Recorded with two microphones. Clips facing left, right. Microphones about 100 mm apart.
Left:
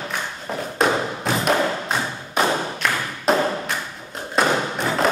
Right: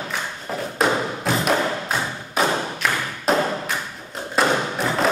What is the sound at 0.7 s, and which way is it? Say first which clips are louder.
Thump: left 1 dB; centre (ahead or behind).